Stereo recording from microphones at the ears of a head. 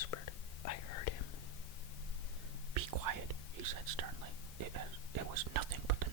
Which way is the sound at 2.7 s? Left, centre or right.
Right.